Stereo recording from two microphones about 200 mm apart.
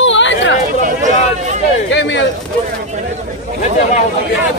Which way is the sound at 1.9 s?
60° left (ahead or behind).